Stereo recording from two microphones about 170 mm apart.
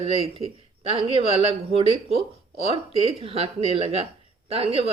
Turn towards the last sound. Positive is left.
turn(degrees=-35)  # may be behind; listen again after turning